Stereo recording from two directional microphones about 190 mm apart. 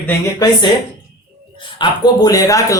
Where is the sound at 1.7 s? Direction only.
20° left (ahead or behind).